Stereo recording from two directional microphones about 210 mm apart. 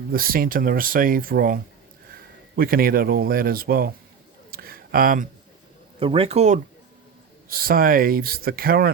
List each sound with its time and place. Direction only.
0.1 s speech: 45° right (ahead or behind)
4.5 s a sound: 45° right (ahead or behind)
6.0 s a man's voice: 25° right (ahead or behind)
7.5 s speech: 45° right (ahead or behind)